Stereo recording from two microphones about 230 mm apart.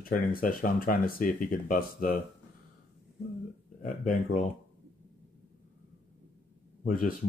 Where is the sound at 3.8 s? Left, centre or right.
Left.